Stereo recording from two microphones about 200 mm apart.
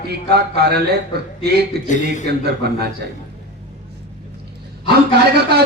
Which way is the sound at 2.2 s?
55° right (ahead or behind).